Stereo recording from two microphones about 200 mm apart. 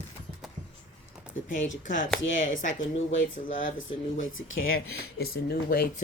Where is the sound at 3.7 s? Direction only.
75° left (ahead or behind).